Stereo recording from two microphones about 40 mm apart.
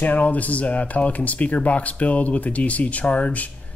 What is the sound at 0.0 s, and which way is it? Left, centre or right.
Speech, left.